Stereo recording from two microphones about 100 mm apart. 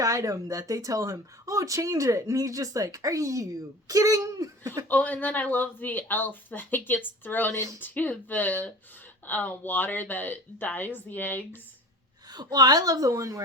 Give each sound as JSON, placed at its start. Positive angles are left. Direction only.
{"t": 0.0, "sound": "speech", "side_deg": -35}
{"t": 4.9, "sound": "speech", "side_deg": 15}
{"t": 12.3, "sound": "speech", "side_deg": -45}